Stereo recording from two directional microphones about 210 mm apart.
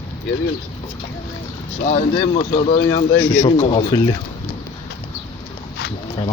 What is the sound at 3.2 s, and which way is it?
Speech, 5° left (ahead or behind).